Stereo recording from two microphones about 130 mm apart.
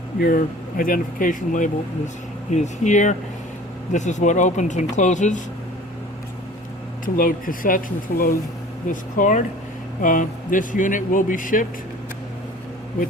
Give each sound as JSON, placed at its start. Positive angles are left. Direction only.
{"t": 0.3, "sound": "speech", "side_deg": 90}
{"t": 2.5, "sound": "speech", "side_deg": 65}
{"t": 7.0, "sound": "speech", "side_deg": 90}
{"t": 8.9, "sound": "speech", "side_deg": 85}